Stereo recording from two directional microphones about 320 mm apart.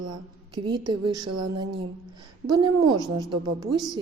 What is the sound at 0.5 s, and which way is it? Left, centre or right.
Speech, centre.